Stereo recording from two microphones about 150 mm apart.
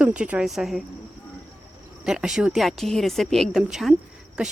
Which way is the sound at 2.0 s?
5° right (ahead or behind).